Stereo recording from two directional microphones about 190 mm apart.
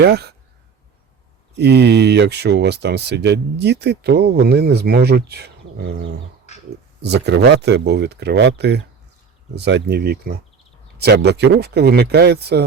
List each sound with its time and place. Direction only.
0.0 s speech: 60° right (ahead or behind)
1.5 s speech: 60° right (ahead or behind)